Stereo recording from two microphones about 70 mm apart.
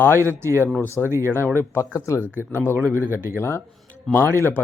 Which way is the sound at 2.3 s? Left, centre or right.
Right.